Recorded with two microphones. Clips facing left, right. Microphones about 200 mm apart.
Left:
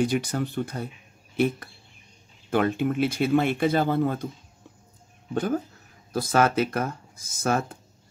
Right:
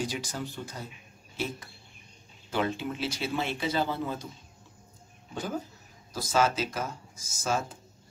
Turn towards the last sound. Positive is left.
turn(degrees=60)  # may be behind; listen again after turning